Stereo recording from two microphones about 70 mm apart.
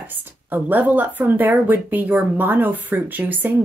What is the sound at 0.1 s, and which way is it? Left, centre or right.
Speech, right.